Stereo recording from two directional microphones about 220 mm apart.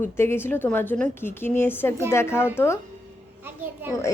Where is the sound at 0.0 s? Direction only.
10° left (ahead or behind).